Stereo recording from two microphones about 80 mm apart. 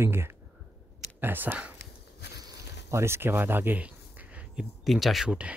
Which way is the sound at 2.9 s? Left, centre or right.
Right.